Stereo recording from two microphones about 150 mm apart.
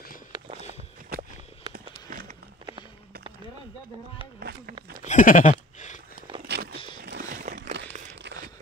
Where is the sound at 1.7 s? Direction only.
65° right (ahead or behind).